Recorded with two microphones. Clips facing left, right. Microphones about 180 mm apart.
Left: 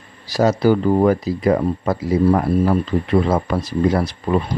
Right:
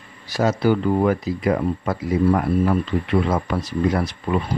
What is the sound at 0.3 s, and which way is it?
Speech, 35° left (ahead or behind).